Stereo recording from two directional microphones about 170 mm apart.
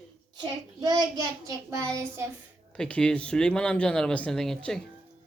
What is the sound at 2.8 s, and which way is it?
Speech, 5° left (ahead or behind).